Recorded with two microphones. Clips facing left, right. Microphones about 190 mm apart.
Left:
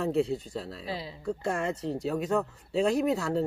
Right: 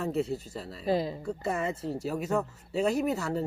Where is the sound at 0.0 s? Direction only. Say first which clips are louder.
Left 3 dB; centre (ahead or behind).